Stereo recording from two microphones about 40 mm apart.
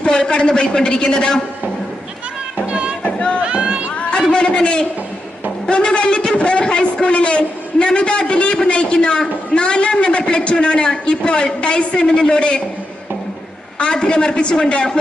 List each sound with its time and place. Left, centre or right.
0.0 s a man's voice: left
2.6 s music: right
3.0 s a sound: left
3.4 s run: right
4.3 s a man's voice: left
13.7 s a man's voice: left